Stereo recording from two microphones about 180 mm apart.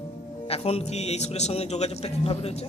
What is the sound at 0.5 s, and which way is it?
A man's voice, 35° left (ahead or behind).